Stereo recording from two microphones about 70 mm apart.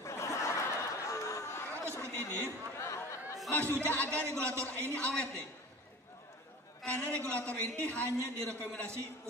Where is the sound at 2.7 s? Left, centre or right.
Left.